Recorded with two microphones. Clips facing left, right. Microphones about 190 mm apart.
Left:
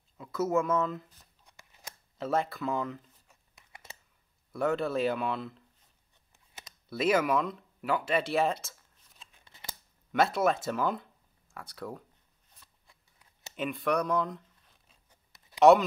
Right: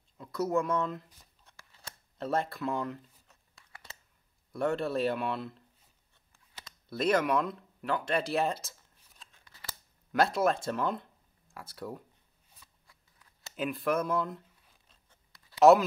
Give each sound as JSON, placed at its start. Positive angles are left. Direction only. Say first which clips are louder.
{"t": 0.2, "sound": "speech", "louder": "left 1 dB", "side_deg": 5}
{"t": 1.4, "sound": "scissors", "louder": "even", "side_deg": 15}
{"t": 2.1, "sound": "speech", "louder": "left 1 dB", "side_deg": 0}
{"t": 3.3, "sound": "a sound", "louder": "even", "side_deg": 15}
{"t": 4.5, "sound": "speech", "louder": "left 1 dB", "side_deg": 0}
{"t": 6.3, "sound": "a sound", "louder": "even", "side_deg": 20}
{"t": 6.9, "sound": "speech", "louder": "left 1 dB", "side_deg": 5}
{"t": 9.4, "sound": "scissors", "louder": "left 1 dB", "side_deg": 20}
{"t": 10.1, "sound": "speech", "louder": "left 1 dB", "side_deg": 0}
{"t": 12.8, "sound": "scissors", "louder": "even", "side_deg": 25}
{"t": 13.6, "sound": "speech", "louder": "left 1 dB", "side_deg": 0}
{"t": 15.3, "sound": "a sound", "louder": "left 1 dB", "side_deg": 20}